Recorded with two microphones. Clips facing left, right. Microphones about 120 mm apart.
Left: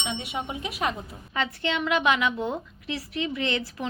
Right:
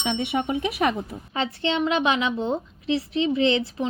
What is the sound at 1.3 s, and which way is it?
A woman's voice, 30° right (ahead or behind).